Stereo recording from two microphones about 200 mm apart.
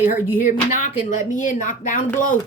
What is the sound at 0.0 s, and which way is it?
Speech, 45° left (ahead or behind).